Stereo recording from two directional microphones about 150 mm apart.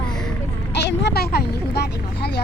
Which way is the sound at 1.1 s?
90° left.